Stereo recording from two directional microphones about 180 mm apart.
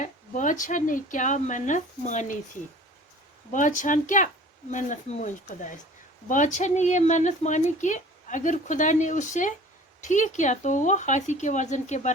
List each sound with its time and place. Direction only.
0.0 s speech: 45° left (ahead or behind)
3.5 s speech: 45° left (ahead or behind)